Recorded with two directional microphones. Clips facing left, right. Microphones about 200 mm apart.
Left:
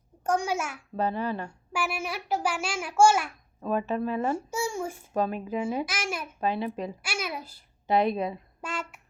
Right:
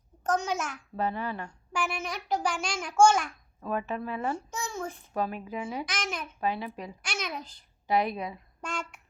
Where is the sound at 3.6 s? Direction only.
25° left (ahead or behind).